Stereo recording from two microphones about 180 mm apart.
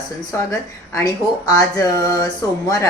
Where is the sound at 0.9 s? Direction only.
20° left (ahead or behind).